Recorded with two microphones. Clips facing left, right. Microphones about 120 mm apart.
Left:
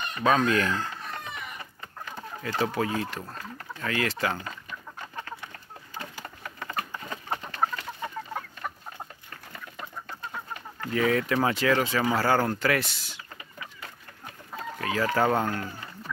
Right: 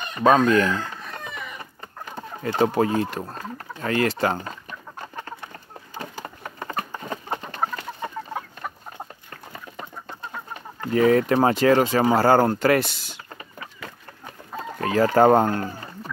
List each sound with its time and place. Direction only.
0.2 s chicken: 35° right (ahead or behind)
2.7 s speech: 35° right (ahead or behind)
3.2 s chicken: 30° right (ahead or behind)
9.5 s chicken: 25° right (ahead or behind)
10.8 s speech: 35° right (ahead or behind)
14.6 s speech: 40° right (ahead or behind)